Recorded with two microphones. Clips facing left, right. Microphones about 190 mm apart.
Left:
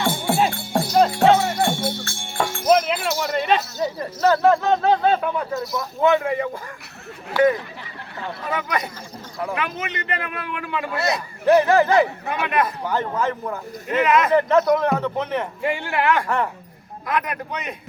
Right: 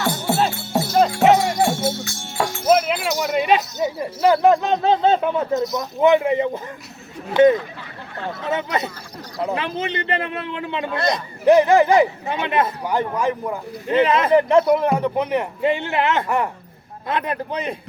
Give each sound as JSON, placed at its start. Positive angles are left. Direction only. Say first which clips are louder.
{"t": 0.0, "sound": "music", "louder": "even", "side_deg": 0}
{"t": 3.2, "sound": "a man's voice", "louder": "right 4 dB", "side_deg": -15}
{"t": 10.9, "sound": "speech", "louder": "right 2 dB", "side_deg": 5}
{"t": 11.4, "sound": "a man's voice", "louder": "right 2 dB", "side_deg": -15}
{"t": 12.8, "sound": "a man's voice", "louder": "right 2 dB", "side_deg": -15}
{"t": 13.8, "sound": "speech", "louder": "right 2 dB", "side_deg": -30}
{"t": 14.3, "sound": "a man's voice", "louder": "right 5 dB", "side_deg": -15}
{"t": 17.1, "sound": "speech", "louder": "right 2 dB", "side_deg": -30}